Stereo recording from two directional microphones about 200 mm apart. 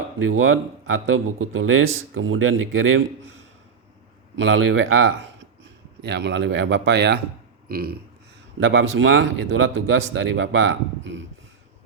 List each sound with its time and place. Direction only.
0.3 s a man's voice: 90° right
4.4 s a man's voice: 85° right
6.0 s speech: 60° right (ahead or behind)
7.7 s a sound: 50° right (ahead or behind)
8.6 s speech: 75° right (ahead or behind)